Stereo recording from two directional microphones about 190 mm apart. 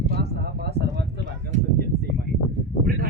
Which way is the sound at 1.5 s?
40° right (ahead or behind).